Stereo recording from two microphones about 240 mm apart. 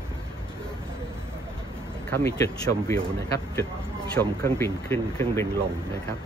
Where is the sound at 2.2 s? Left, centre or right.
Centre.